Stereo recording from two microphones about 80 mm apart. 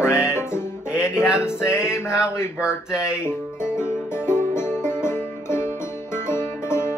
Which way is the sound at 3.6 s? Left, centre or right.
Left.